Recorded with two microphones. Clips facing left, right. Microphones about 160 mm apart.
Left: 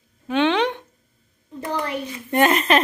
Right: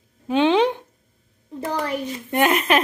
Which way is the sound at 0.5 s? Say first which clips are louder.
Right 3 dB; 5° right (ahead or behind).